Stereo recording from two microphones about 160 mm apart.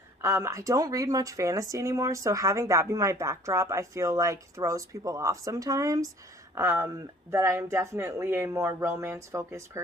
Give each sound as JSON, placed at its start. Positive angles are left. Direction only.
{"t": 0.2, "sound": "speech", "side_deg": -15}